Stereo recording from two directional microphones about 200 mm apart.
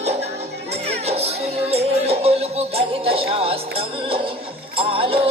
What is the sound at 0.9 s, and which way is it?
Music, 30° right (ahead or behind).